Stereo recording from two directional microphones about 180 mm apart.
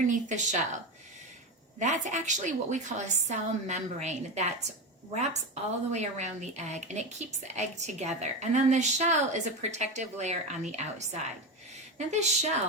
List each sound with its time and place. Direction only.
0.0 s speech: 45° right (ahead or behind)
1.8 s a woman's voice: 40° right (ahead or behind)
5.9 s a woman's voice: 40° right (ahead or behind)